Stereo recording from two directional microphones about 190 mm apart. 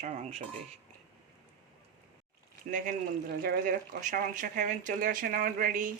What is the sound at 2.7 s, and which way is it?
Speech, 45° right (ahead or behind).